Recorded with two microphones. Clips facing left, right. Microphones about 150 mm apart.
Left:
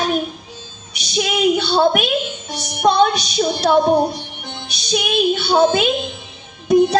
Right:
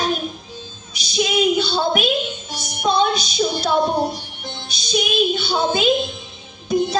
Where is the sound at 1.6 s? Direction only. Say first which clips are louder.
Left 4 dB; 65° left (ahead or behind).